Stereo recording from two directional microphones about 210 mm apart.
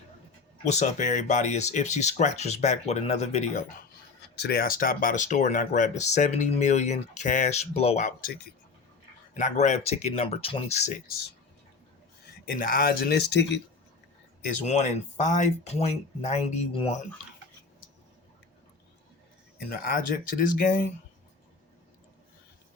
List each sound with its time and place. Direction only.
0.6 s speech: 35° left (ahead or behind)
4.4 s speech: 50° left (ahead or behind); by 10.9 s 30° left (ahead or behind)
12.5 s speech: 40° left (ahead or behind)
14.6 s speech: 30° left (ahead or behind)
19.7 s speech: 40° left (ahead or behind)